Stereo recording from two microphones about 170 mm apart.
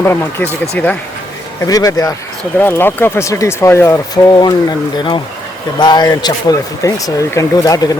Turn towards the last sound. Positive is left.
turn(degrees=20)  # may be behind; listen again after turning